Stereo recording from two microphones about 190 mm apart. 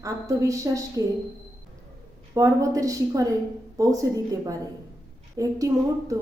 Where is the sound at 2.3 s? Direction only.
15° right (ahead or behind).